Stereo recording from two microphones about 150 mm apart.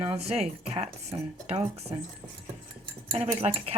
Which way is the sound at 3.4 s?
40° right (ahead or behind).